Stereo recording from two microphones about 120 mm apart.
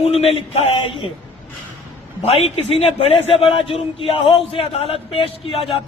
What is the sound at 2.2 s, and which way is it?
Speech, 60° left (ahead or behind).